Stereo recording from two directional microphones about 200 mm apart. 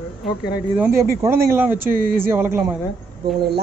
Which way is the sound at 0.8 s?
10° right (ahead or behind).